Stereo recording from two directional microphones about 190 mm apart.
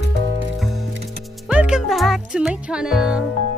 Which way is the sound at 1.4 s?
5° right (ahead or behind).